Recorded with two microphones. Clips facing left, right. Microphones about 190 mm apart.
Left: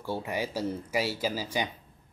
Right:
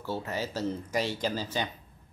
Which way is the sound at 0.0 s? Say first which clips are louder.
Left 1 dB; 15° left (ahead or behind).